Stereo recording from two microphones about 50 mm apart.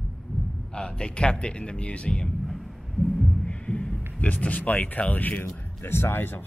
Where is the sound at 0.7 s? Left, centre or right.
Centre.